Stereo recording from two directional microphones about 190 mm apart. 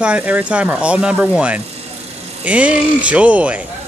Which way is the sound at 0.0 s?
5° right (ahead or behind).